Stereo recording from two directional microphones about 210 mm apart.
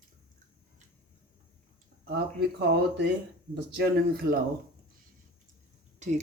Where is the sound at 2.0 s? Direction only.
50° right (ahead or behind).